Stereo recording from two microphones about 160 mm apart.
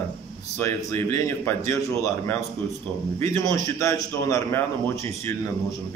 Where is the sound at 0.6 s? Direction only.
15° left (ahead or behind).